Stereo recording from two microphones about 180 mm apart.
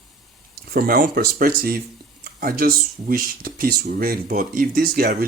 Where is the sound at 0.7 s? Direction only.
55° right (ahead or behind).